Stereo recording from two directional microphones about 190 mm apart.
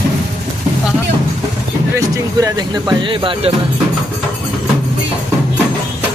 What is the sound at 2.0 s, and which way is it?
Speech, 20° right (ahead or behind).